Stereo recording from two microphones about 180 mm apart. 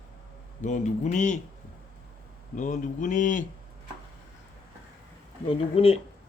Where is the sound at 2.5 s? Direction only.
45° left (ahead or behind).